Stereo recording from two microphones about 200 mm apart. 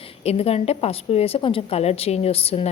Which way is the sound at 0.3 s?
30° left (ahead or behind).